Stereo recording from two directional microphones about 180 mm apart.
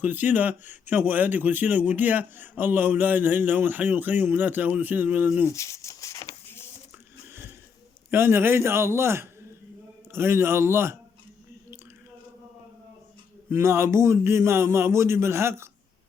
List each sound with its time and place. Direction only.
0.0 s speech: 10° right (ahead or behind)
5.5 s a sound: 15° left (ahead or behind)
8.1 s speech: 15° right (ahead or behind)
13.5 s speech: 15° right (ahead or behind)